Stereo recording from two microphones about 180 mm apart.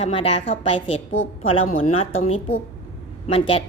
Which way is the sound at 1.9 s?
35° left (ahead or behind).